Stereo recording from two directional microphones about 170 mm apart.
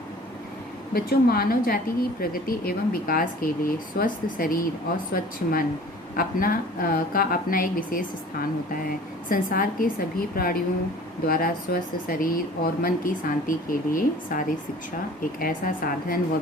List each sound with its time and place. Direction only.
0.9 s a woman's voice: 65° left (ahead or behind)